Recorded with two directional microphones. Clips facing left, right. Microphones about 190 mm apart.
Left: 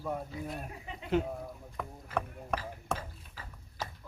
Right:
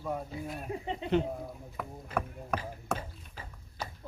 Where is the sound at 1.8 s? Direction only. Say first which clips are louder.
Right 1 dB; 5° right (ahead or behind).